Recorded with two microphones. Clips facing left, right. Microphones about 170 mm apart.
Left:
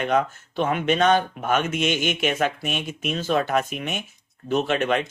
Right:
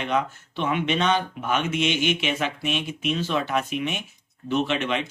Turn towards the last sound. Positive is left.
turn(degrees=45)  # may be behind; listen again after turning